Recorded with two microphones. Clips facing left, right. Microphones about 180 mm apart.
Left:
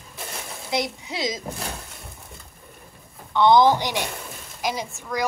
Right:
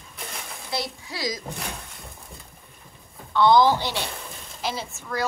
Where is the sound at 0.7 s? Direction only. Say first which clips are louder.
Left 5 dB; 20° left (ahead or behind).